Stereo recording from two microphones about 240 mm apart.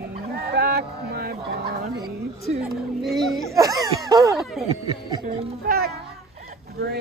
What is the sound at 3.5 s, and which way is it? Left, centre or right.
Laughter, centre.